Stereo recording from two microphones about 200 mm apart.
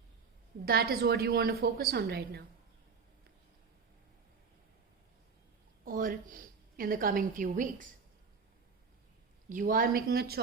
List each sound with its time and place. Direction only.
0.6 s a woman's voice: 50° right (ahead or behind)
5.8 s a woman's voice: 45° right (ahead or behind)
9.5 s a woman's voice: 40° right (ahead or behind)